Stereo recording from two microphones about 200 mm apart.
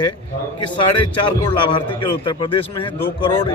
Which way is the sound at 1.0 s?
25° left (ahead or behind).